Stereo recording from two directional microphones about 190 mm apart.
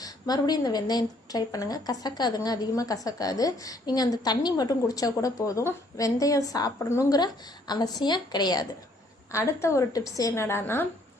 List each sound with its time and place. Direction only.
0.0 s a woman's voice: 20° left (ahead or behind)